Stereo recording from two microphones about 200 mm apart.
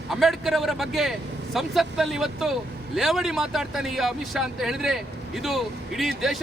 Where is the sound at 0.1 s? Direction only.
Centre (ahead or behind).